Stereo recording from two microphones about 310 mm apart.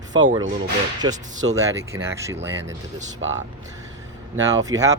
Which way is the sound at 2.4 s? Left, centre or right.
Right.